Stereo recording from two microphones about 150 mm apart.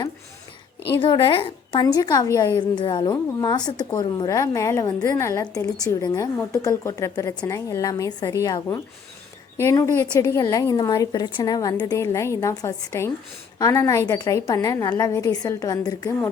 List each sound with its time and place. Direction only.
0.9 s a woman's voice: 30° left (ahead or behind)